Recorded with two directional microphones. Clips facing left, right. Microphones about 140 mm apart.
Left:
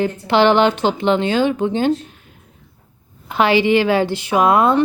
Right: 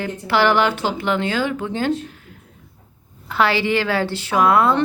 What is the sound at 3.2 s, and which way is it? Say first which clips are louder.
Speech: left 4 dB; 20° left (ahead or behind).